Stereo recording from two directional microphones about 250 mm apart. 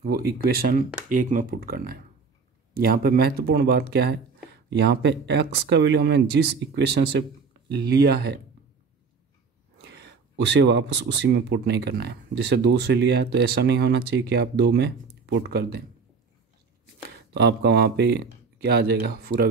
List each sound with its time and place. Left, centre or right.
0.0 s speech: right
9.8 s speech: right
17.3 s speech: right